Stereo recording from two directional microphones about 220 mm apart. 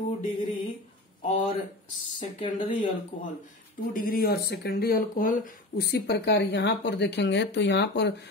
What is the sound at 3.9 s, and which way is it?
Speech, 40° left (ahead or behind).